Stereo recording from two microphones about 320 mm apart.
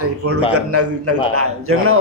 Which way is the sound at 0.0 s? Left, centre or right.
Right.